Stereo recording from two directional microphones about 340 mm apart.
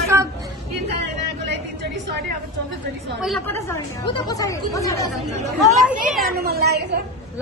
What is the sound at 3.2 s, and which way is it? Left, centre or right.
Speech, centre.